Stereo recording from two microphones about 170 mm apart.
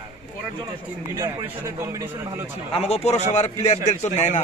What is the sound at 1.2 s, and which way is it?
Speech, 20° right (ahead or behind).